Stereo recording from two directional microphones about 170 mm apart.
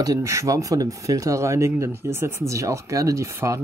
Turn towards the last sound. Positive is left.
turn(degrees=-15)  # may be behind; listen again after turning